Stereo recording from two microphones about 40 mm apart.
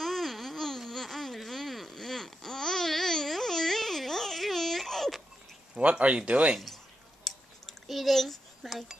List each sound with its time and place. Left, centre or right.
0.0 s a sound: centre
5.8 s speech: right
7.2 s dishes: centre